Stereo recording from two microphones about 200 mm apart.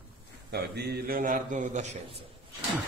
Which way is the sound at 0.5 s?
55° right (ahead or behind).